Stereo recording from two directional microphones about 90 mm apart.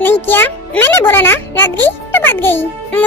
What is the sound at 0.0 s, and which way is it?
A child's voice, 25° left (ahead or behind).